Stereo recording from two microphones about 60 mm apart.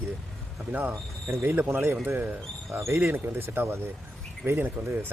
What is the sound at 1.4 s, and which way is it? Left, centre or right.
Speech, right.